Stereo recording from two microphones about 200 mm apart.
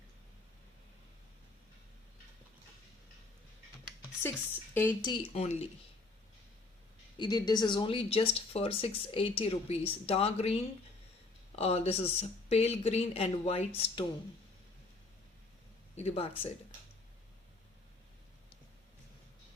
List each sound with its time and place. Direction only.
4.7 s speech: 10° left (ahead or behind)
5.0 s speech: 30° left (ahead or behind)
7.2 s speech: 20° left (ahead or behind)
16.0 s speech: 30° left (ahead or behind)